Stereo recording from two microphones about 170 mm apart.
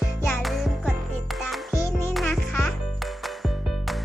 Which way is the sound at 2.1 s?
5° left (ahead or behind).